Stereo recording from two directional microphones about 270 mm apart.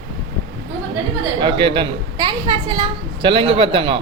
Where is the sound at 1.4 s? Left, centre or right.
Centre.